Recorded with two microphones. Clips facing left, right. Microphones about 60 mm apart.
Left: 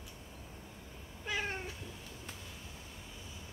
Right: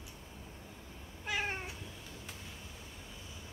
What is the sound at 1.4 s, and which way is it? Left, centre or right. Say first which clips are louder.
Cat: right 1 dB; right.